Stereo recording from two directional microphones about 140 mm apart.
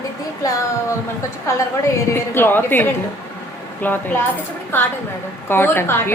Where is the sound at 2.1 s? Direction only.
15° left (ahead or behind).